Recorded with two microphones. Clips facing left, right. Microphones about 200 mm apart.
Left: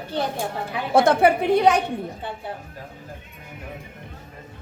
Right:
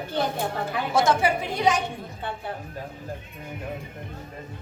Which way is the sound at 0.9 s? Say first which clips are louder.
Left 6 dB; 60° left (ahead or behind).